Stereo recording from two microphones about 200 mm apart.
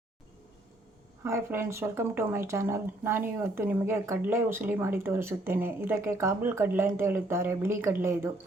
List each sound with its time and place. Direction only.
1.2 s speech: 10° right (ahead or behind)